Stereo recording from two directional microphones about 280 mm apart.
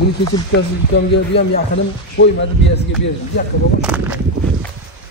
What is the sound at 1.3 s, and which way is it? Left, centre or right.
Speech, left.